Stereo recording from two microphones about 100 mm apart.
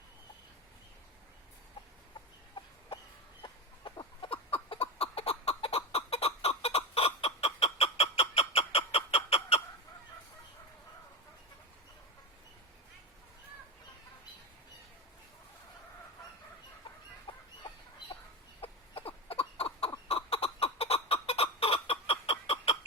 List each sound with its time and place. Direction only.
3.4 s chicken: 50° left (ahead or behind); by 9.6 s 85° left
17.3 s chicken: 60° left (ahead or behind)
18.6 s chicken: 70° left (ahead or behind)
20.1 s fowl: 80° left